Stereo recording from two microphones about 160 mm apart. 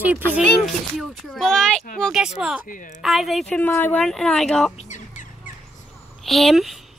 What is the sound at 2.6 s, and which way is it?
Speech, 55° left (ahead or behind).